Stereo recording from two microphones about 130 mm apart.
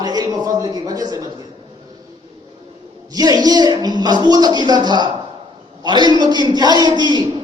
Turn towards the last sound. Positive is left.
turn(degrees=-35)  # may be behind; listen again after turning